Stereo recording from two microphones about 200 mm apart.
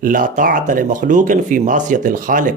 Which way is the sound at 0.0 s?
40° right (ahead or behind).